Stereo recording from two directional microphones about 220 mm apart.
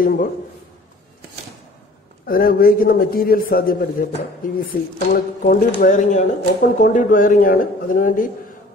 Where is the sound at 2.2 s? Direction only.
40° left (ahead or behind).